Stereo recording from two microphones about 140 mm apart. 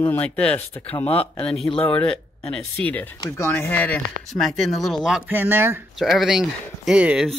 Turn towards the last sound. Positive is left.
turn(degrees=-5)  # may be behind; listen again after turning